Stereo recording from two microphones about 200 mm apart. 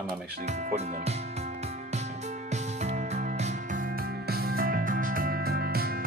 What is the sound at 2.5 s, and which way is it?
Music, 35° right (ahead or behind).